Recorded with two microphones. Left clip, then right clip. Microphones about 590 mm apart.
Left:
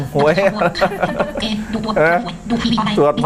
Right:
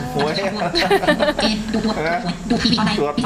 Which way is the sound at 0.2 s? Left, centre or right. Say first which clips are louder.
Left 7 dB; left.